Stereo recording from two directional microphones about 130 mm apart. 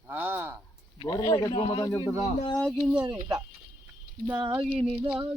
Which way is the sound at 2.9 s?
30° right (ahead or behind).